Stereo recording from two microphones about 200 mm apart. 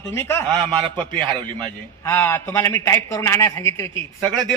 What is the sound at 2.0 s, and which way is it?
A man's voice, 10° left (ahead or behind).